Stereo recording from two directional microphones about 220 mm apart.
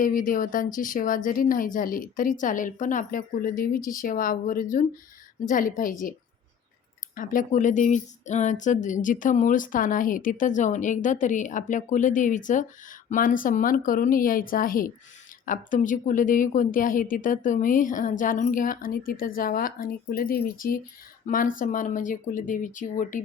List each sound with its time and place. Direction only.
0.0 s speech: 40° left (ahead or behind)
7.2 s speech: 40° left (ahead or behind)